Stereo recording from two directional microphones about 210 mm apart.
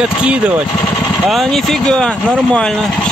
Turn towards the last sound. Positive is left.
turn(degrees=0)  # may be behind; listen again after turning